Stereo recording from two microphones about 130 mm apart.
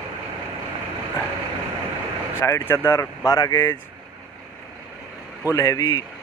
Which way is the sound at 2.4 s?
20° left (ahead or behind).